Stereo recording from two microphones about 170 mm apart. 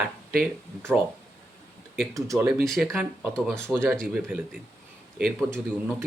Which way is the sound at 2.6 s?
Centre (ahead or behind).